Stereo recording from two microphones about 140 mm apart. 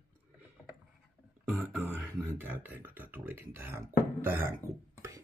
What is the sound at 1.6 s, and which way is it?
Speech, 15° right (ahead or behind).